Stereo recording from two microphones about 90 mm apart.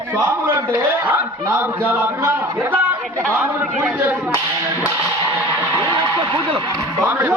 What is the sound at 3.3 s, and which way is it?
Speech, 10° right (ahead or behind).